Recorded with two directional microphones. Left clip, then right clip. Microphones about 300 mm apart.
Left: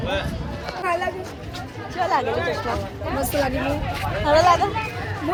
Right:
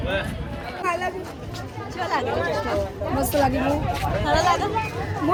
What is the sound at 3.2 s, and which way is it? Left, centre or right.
Speech, right.